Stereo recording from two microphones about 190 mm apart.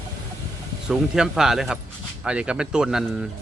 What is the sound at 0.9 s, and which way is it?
Speech, 5° right (ahead or behind).